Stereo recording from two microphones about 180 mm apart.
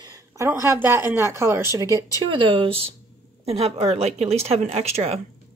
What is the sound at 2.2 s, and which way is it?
Speech, 25° right (ahead or behind).